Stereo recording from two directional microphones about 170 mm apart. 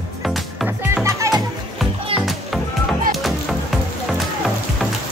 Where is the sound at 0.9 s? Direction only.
15° right (ahead or behind).